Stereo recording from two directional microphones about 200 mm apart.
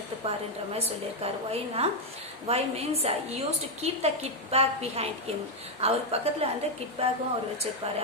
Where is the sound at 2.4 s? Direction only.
30° right (ahead or behind).